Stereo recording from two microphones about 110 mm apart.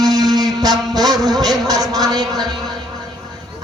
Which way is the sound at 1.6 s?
35° right (ahead or behind).